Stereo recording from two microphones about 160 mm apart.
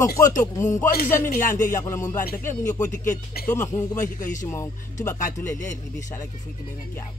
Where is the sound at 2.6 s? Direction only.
50° left (ahead or behind).